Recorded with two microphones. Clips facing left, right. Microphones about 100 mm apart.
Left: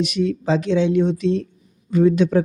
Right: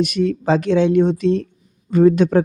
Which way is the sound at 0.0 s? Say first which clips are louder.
Right 2 dB; 50° right (ahead or behind).